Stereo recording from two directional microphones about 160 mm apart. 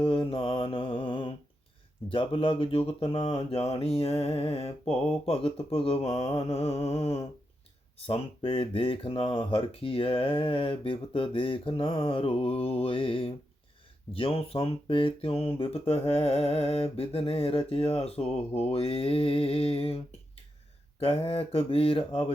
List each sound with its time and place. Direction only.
0.0 s speech: 35° left (ahead or behind)
6.1 s mantra: 20° left (ahead or behind)
6.4 s speech: 40° left (ahead or behind)
21.0 s speech: 35° left (ahead or behind)